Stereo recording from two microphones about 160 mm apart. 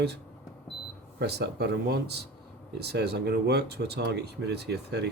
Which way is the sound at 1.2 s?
90° right.